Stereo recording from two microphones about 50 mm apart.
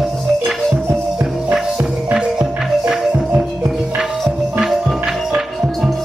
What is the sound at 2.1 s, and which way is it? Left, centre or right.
Music, centre.